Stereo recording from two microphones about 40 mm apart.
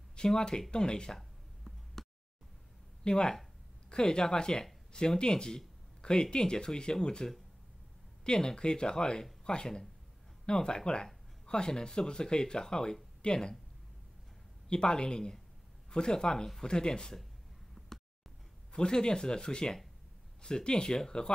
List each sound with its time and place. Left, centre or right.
0.4 s speech: left
2.0 s a sound: centre
3.0 s speech: centre
14.7 s speech: left
17.8 s a sound: centre
18.7 s speech: left